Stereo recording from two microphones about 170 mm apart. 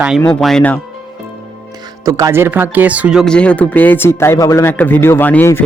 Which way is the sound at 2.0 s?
20° right (ahead or behind).